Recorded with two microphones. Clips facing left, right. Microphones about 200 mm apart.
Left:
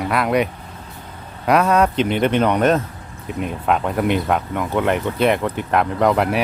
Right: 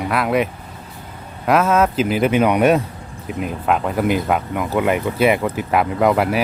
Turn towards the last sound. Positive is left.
turn(degrees=-5)  # may be behind; listen again after turning